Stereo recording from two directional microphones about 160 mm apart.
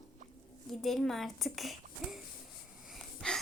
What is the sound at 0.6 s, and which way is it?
A child's voice, centre (ahead or behind).